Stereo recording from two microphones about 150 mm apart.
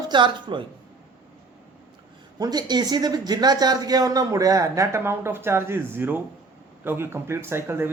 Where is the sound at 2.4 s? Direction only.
25° right (ahead or behind).